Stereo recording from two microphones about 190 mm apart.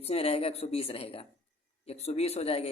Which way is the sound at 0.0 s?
30° left (ahead or behind).